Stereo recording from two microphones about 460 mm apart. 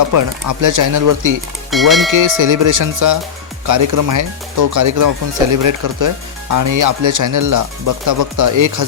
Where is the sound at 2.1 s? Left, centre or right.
Right.